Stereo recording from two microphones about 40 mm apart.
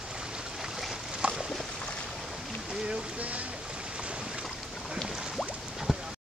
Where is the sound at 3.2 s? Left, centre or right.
Right.